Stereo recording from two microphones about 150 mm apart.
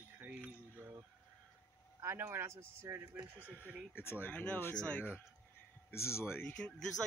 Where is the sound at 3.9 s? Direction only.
15° left (ahead or behind).